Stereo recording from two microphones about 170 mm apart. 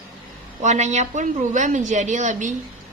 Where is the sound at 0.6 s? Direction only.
45° right (ahead or behind).